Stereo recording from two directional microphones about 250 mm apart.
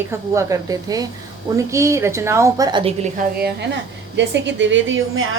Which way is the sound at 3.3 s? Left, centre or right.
Right.